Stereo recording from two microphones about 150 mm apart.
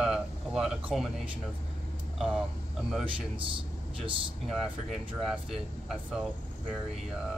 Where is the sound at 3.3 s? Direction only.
35° right (ahead or behind).